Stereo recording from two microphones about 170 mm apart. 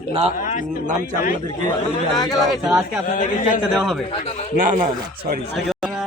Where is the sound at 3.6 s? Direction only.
5° right (ahead or behind).